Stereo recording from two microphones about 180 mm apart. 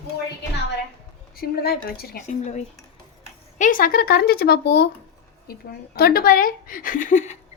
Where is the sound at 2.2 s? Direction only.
40° left (ahead or behind).